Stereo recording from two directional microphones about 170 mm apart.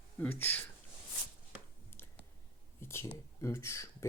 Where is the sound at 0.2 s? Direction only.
10° left (ahead or behind).